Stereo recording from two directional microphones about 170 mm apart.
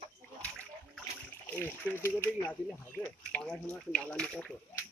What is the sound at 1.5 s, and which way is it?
Speech, 10° left (ahead or behind).